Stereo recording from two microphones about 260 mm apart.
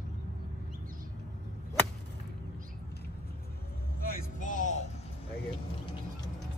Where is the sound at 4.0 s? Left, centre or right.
Left.